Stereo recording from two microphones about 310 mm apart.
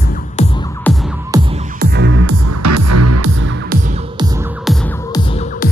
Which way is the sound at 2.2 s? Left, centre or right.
Right.